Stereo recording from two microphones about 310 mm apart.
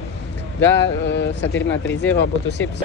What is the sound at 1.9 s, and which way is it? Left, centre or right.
Speech, centre.